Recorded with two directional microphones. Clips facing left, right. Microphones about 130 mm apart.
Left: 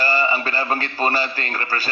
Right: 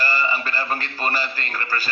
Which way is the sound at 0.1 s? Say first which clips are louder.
Left 3 dB; 25° left (ahead or behind).